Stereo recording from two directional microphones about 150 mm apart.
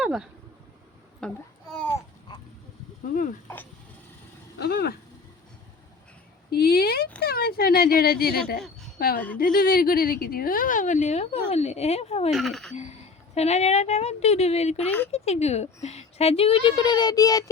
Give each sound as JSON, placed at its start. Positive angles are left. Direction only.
{"t": 0.0, "sound": "a sound", "side_deg": -5}
{"t": 1.2, "sound": "speech", "side_deg": 5}
{"t": 2.3, "sound": "vehicle", "side_deg": 30}
{"t": 3.4, "sound": "speech", "side_deg": 15}
{"t": 4.6, "sound": "speech", "side_deg": 90}
{"t": 6.5, "sound": "a woman's voice", "side_deg": 90}
{"t": 12.3, "sound": "speech", "side_deg": 0}
{"t": 13.3, "sound": "speech", "side_deg": 45}
{"t": 14.8, "sound": "speech", "side_deg": 10}
{"t": 15.1, "sound": "a woman's voice", "side_deg": 45}